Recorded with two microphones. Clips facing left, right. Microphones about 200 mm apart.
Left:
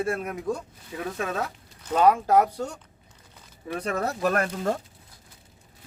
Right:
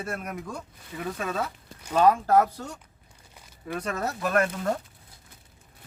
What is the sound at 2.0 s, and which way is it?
Speech, 15° left (ahead or behind).